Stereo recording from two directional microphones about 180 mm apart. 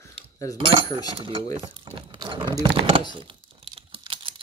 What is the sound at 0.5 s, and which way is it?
Cutlery, 25° right (ahead or behind).